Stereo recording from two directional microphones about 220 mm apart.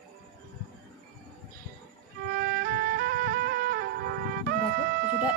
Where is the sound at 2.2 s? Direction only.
45° right (ahead or behind).